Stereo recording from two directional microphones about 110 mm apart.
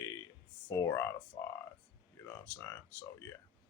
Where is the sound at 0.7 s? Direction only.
25° left (ahead or behind).